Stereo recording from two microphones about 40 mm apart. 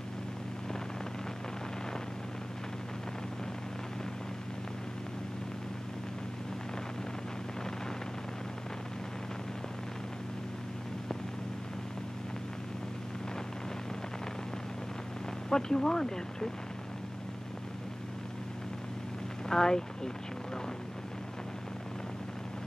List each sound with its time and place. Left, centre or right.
15.5 s speech: centre
19.5 s speech: centre